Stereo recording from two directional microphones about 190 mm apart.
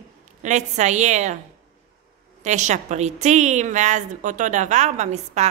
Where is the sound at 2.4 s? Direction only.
40° right (ahead or behind).